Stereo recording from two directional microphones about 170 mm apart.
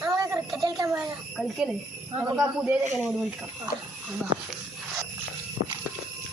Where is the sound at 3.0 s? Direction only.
5° right (ahead or behind).